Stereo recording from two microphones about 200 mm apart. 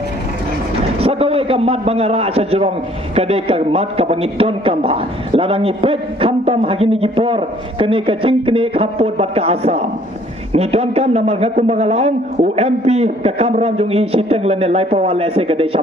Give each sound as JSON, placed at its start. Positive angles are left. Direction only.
{"t": 1.0, "sound": "a man's voice", "side_deg": -30}